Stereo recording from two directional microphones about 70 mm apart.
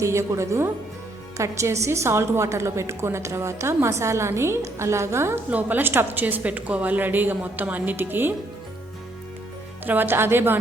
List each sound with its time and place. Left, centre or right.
0.0 s a woman's voice: right
5.5 s a woman's voice: right
9.8 s a woman's voice: right